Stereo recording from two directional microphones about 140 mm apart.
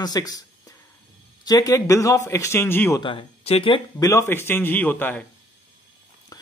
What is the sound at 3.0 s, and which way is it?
Speech, 40° left (ahead or behind).